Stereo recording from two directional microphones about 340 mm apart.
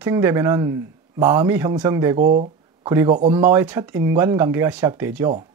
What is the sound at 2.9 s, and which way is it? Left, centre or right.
Speech, centre.